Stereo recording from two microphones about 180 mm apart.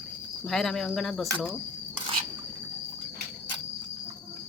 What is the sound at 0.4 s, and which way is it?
Speech, centre (ahead or behind).